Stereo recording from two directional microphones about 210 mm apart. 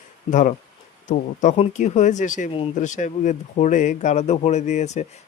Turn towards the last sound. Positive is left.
turn(degrees=35)  # may be behind; listen again after turning